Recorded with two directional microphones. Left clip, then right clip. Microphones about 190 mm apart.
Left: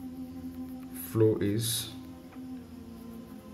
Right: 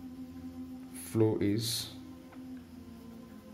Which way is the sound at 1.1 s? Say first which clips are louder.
Left 3 dB; 15° right (ahead or behind).